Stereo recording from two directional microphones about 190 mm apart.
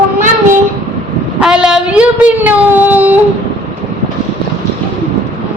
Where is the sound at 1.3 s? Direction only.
5° right (ahead or behind).